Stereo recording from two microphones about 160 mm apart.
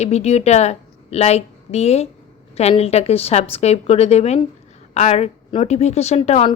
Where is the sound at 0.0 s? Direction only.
40° left (ahead or behind).